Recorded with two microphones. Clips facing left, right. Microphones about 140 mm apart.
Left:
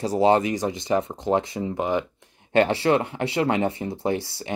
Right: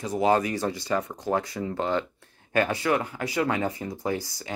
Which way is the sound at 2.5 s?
25° left (ahead or behind).